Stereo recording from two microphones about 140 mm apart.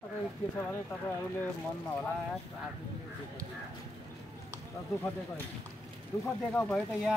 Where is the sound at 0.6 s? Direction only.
15° left (ahead or behind).